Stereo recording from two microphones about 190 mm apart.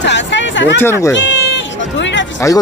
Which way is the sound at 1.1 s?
70° left (ahead or behind).